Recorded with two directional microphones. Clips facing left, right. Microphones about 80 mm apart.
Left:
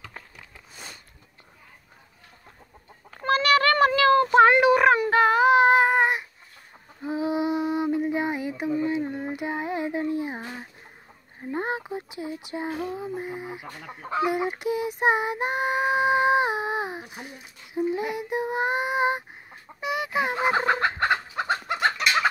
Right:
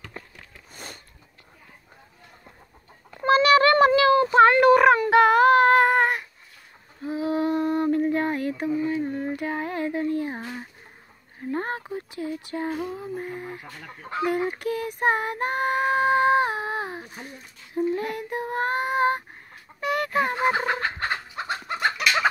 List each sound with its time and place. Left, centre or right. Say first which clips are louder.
3.3 s a sound: right 4 dB; right
4.5 s a sound: right 2 dB; centre
5.1 s child singing: right 3 dB; centre
5.5 s humming: right 1 dB; centre
7.0 s female singing: even; left
7.3 s mantra: right 3 dB; centre
8.8 s a sound: right 1 dB; left
14.2 s female singing: right 1 dB; centre
19.8 s chicken: right 2 dB; centre
20.5 s fowl: left 3 dB; left
21.6 s chicken: right 1 dB; centre
22.0 s fowl: right 2 dB; centre